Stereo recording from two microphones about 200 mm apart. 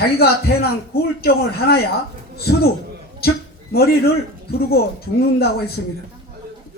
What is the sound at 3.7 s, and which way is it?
Speech, 50° left (ahead or behind).